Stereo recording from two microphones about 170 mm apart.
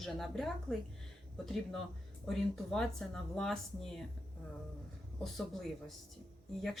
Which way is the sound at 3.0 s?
5° left (ahead or behind).